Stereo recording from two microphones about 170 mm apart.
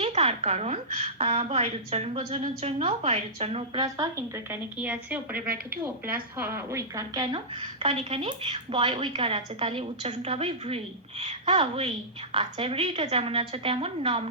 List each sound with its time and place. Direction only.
0.0 s a woman's voice: 35° right (ahead or behind)
3.8 s a woman's voice: 25° right (ahead or behind)
4.8 s a woman's voice: 10° right (ahead or behind)
5.7 s a woman's voice: 60° right (ahead or behind)
6.3 s a woman's voice: 10° right (ahead or behind); by 14.3 s 35° right (ahead or behind)